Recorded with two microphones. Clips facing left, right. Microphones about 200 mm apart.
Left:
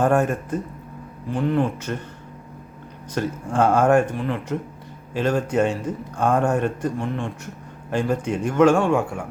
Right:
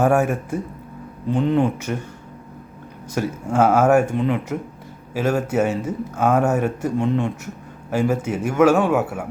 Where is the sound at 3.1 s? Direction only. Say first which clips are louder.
Right 2 dB; 10° right (ahead or behind).